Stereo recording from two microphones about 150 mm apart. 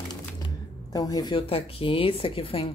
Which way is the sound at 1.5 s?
40° left (ahead or behind).